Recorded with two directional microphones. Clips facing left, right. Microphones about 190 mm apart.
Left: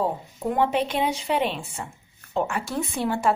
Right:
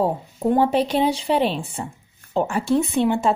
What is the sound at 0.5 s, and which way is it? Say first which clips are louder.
A woman's voice: right 5 dB; 35° right (ahead or behind).